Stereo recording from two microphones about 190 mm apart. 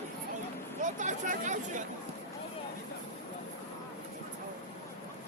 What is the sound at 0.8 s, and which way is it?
Speech, 40° right (ahead or behind).